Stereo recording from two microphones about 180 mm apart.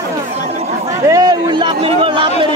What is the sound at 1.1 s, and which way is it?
A man's voice, 25° right (ahead or behind).